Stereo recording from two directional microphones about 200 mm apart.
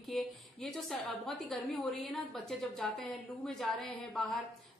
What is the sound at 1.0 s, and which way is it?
A woman's voice, centre (ahead or behind).